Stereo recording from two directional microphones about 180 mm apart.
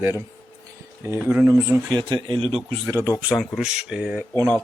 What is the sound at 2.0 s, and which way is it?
Speech, 25° right (ahead or behind).